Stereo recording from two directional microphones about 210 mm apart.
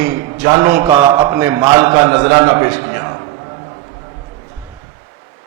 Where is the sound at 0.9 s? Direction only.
25° right (ahead or behind).